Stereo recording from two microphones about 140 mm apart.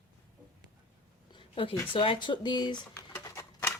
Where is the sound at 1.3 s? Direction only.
40° left (ahead or behind).